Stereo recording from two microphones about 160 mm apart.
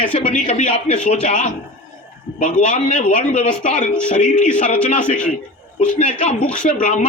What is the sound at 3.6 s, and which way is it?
Speech, 55° left (ahead or behind).